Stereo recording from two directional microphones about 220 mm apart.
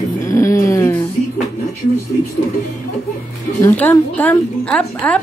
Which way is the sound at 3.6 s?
10° left (ahead or behind).